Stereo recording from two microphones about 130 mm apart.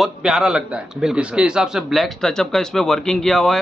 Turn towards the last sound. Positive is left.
turn(degrees=5)  # may be behind; listen again after turning